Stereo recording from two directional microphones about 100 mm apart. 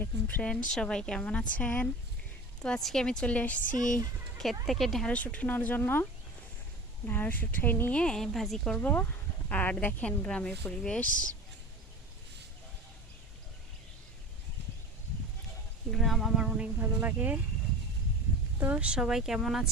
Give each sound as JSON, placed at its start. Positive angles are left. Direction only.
{"t": 0.0, "sound": "a woman's voice", "side_deg": 15}
{"t": 0.5, "sound": "a woman's voice", "side_deg": 5}
{"t": 4.6, "sound": "speech", "side_deg": 0}
{"t": 5.1, "sound": "a woman's voice", "side_deg": 15}
{"t": 15.9, "sound": "speech", "side_deg": 0}
{"t": 18.6, "sound": "speech", "side_deg": -15}